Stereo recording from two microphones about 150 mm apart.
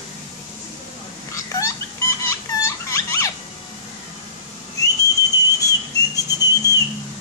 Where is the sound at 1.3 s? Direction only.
20° left (ahead or behind).